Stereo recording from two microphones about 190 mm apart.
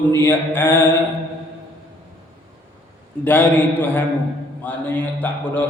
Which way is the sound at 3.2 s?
10° left (ahead or behind).